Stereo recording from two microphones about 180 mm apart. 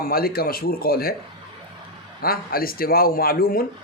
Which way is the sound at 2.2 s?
55° left (ahead or behind).